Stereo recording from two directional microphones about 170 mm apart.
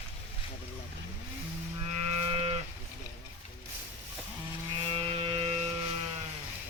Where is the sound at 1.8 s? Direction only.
40° right (ahead or behind).